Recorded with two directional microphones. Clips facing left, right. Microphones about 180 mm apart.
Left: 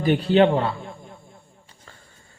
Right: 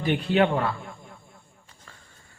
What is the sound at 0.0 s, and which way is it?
Speech, 35° left (ahead or behind).